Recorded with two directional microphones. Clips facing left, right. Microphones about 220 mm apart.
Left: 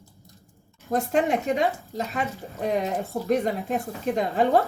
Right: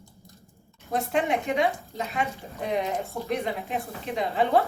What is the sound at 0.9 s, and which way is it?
Speech, 45° left (ahead or behind).